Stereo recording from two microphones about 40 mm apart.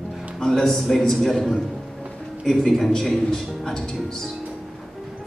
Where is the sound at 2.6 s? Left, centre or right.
Centre.